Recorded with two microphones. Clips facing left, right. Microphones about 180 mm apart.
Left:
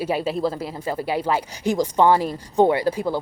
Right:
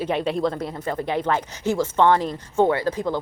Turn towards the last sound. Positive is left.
turn(degrees=10)  # may be behind; listen again after turning